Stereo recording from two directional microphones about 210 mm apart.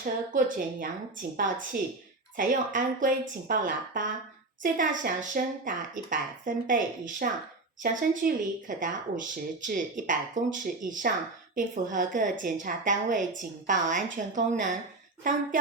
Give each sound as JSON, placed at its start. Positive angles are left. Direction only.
{"t": 0.0, "sound": "speech", "side_deg": -40}
{"t": 2.3, "sound": "speech", "side_deg": -40}